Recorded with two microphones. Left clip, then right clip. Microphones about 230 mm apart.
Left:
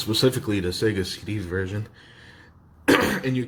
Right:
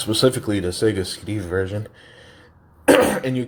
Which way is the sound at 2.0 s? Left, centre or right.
Centre.